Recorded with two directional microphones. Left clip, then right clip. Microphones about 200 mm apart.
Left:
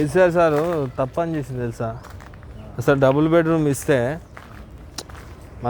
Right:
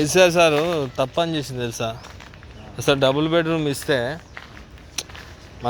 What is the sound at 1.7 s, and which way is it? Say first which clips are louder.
Speech: right 2 dB; 5° left (ahead or behind).